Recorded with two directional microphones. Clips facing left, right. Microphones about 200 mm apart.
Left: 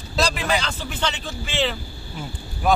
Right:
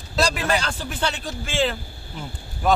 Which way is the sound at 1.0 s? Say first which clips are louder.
Even; 10° right (ahead or behind).